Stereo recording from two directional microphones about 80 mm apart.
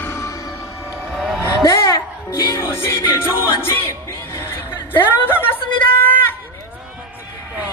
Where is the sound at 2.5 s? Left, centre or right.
Left.